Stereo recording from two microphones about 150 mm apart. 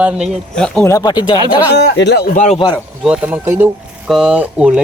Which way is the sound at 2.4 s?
40° left (ahead or behind).